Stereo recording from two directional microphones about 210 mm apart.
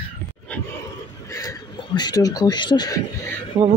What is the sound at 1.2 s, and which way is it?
Speech, 15° left (ahead or behind).